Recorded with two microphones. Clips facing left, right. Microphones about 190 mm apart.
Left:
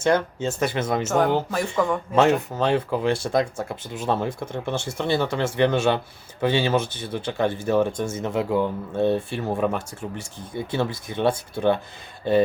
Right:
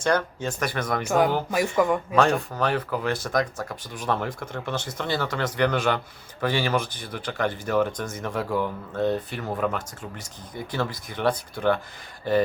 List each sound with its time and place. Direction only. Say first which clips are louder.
0.0 s speech: left 3 dB; 25° left (ahead or behind)
1.0 s speech: right 1 dB; 10° right (ahead or behind)
2.5 s speech: left 3 dB; 25° left (ahead or behind)